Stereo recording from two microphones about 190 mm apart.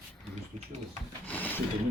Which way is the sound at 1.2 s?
10° left (ahead or behind).